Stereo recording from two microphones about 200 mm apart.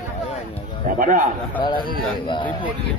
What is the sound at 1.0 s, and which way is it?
Speech, 40° right (ahead or behind).